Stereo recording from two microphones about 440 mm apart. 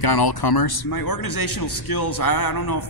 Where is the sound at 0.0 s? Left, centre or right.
Left.